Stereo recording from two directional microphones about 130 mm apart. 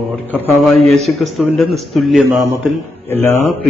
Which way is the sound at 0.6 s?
Centre (ahead or behind).